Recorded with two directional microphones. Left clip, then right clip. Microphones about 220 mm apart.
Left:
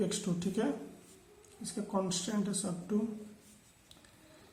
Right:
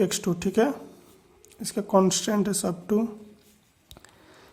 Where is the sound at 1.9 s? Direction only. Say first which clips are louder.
Right 14 dB; 35° right (ahead or behind).